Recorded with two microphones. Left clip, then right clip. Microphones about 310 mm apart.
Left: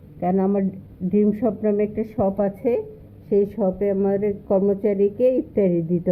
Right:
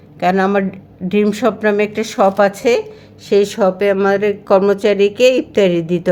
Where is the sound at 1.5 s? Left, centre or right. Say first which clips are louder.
Right 7 dB; right.